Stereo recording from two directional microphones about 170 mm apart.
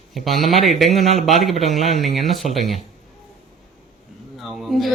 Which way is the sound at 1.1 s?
40° right (ahead or behind).